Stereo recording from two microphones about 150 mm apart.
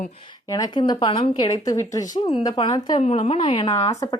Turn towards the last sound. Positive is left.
turn(degrees=25)  # may be behind; listen again after turning